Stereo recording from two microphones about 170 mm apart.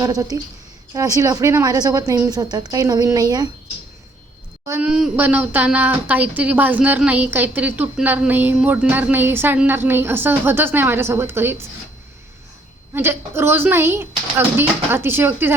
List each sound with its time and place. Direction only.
0.0 s a woman's voice: 20° right (ahead or behind)
4.6 s a woman's voice: 15° right (ahead or behind)
4.9 s a woman's voice: 5° right (ahead or behind)
12.9 s a woman's voice: 15° right (ahead or behind)